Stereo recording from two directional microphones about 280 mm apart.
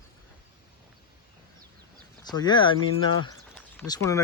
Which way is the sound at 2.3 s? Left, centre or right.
Centre.